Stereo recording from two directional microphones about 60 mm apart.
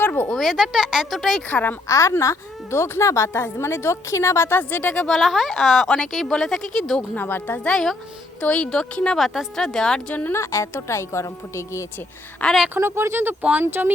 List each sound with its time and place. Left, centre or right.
0.0 s a sound: left
0.3 s a sound: centre
0.5 s speech: centre
1.5 s a woman's voice: left
1.9 s a woman's voice: left
4.9 s a woman's voice: centre
7.2 s speech: left
7.7 s speech: centre
8.4 s speech: centre
9.1 s a woman's voice: centre
9.6 s speech: centre
10.3 s a woman's voice: left
12.7 s speech: right